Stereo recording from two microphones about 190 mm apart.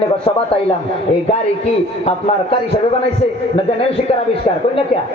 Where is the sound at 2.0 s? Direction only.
30° left (ahead or behind).